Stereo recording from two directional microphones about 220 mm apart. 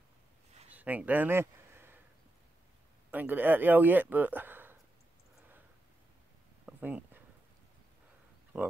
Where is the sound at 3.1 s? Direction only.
10° right (ahead or behind).